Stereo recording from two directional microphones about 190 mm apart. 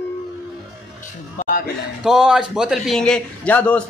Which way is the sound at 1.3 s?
45° left (ahead or behind).